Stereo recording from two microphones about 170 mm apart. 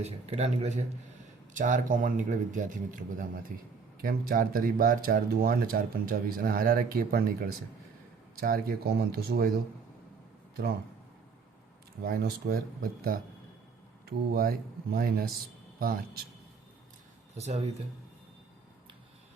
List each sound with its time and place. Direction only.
0.0 s a man's voice: 40° right (ahead or behind); by 9.5 s 70° right (ahead or behind)
12.0 s speech: 65° right (ahead or behind)
17.3 s a man's voice: 40° right (ahead or behind)